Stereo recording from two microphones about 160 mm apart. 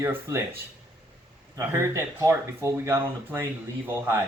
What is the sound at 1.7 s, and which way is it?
Speech, 15° right (ahead or behind).